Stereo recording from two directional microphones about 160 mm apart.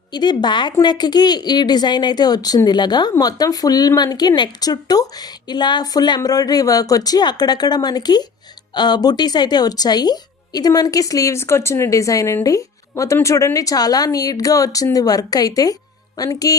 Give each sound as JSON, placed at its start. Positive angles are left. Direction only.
{"t": 0.1, "sound": "speech", "side_deg": 25}